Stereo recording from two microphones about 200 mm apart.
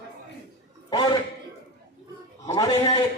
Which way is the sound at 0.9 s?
20° left (ahead or behind).